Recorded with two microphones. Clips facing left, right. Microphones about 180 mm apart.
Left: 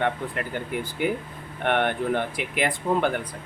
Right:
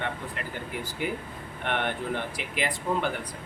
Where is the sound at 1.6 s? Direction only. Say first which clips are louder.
Left 6 dB; 55° left (ahead or behind).